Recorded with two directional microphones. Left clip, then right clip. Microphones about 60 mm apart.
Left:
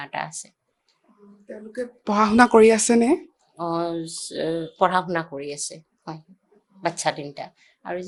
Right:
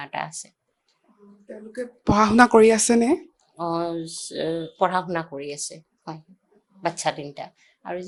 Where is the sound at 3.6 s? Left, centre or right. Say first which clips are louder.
Even; centre.